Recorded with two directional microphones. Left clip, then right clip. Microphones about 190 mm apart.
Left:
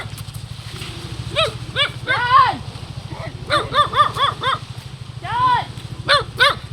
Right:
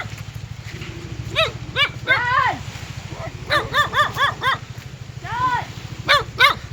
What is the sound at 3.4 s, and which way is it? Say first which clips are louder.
Dog: left 2 dB; 55° right (ahead or behind).